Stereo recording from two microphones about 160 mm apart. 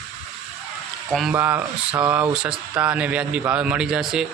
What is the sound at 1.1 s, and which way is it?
Speech, centre (ahead or behind).